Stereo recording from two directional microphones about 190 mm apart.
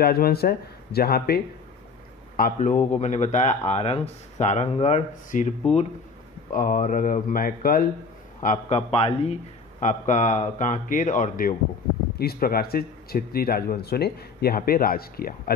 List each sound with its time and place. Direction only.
0.0 s speech: 55° left (ahead or behind)
2.3 s a man's voice: 45° left (ahead or behind)